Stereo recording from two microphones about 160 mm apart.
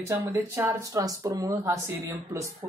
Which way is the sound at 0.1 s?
20° right (ahead or behind).